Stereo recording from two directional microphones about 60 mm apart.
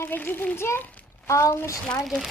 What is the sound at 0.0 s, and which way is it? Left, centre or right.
Speech, left.